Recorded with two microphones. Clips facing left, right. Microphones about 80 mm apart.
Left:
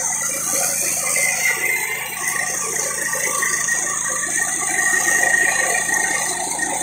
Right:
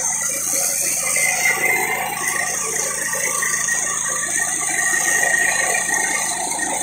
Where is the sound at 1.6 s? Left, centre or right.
Right.